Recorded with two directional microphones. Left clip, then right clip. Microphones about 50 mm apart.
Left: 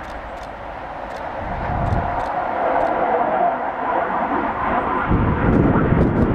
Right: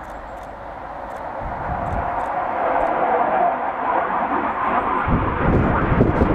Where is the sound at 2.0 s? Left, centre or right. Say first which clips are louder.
Left 1 dB; left.